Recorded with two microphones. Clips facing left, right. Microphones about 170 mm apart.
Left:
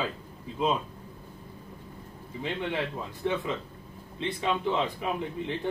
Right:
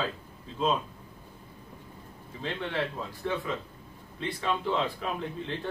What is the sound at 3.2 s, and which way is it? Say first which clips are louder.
A man's voice: left 3 dB; 20° left (ahead or behind).